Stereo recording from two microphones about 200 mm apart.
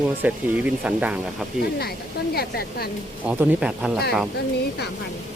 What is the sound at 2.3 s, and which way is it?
Speech, 50° left (ahead or behind).